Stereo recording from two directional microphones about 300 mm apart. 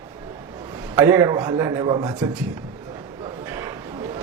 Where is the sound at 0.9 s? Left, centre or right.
Centre.